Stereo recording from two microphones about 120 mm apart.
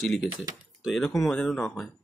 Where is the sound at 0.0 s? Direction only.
Centre (ahead or behind).